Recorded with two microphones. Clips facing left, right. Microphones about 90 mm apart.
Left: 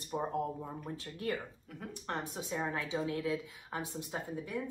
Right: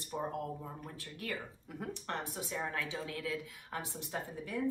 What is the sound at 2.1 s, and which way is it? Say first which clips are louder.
A woman's voice: left 4 dB; 20° left (ahead or behind).